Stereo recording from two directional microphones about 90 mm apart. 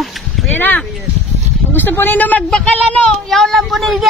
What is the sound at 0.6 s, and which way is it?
Speech, 20° left (ahead or behind).